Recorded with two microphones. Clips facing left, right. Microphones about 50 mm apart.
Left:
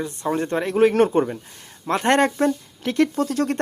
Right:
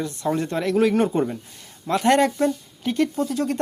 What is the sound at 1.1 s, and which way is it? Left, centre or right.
A man's voice, left.